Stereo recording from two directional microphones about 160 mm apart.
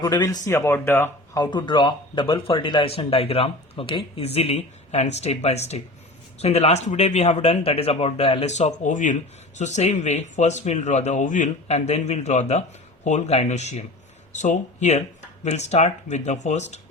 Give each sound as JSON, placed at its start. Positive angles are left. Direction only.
{"t": 0.0, "sound": "speech", "side_deg": 25}
{"t": 1.4, "sound": "speech", "side_deg": 30}